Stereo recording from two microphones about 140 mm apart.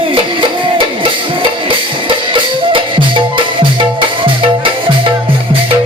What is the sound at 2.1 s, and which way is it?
Music, 35° right (ahead or behind).